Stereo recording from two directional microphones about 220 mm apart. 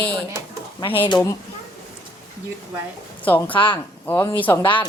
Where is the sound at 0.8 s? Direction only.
20° left (ahead or behind).